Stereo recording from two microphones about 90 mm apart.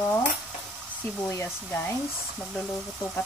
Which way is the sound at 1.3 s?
25° left (ahead or behind).